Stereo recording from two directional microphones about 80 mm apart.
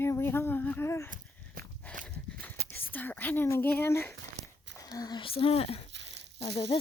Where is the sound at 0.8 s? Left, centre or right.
Left.